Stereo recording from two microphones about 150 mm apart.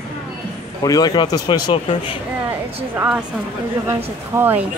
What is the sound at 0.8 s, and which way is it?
Speech, 25° left (ahead or behind).